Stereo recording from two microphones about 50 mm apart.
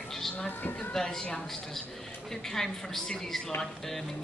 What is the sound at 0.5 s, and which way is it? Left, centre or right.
Speech, left.